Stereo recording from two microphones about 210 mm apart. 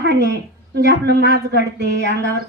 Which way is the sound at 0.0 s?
50° right (ahead or behind).